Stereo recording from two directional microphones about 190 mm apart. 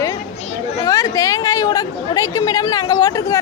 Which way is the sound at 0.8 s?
15° left (ahead or behind).